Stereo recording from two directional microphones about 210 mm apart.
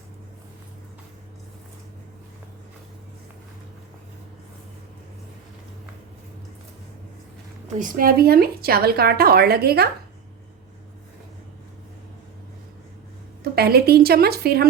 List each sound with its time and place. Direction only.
7.8 s a woman's voice: 45° right (ahead or behind)
13.4 s a woman's voice: 45° right (ahead or behind)